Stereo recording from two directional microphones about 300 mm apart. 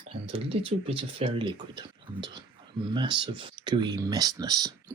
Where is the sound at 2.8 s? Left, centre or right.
Centre.